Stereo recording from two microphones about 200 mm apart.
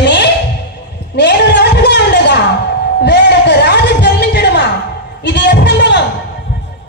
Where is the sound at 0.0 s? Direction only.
60° left (ahead or behind).